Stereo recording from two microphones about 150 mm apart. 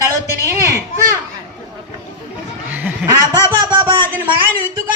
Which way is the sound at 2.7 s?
10° right (ahead or behind).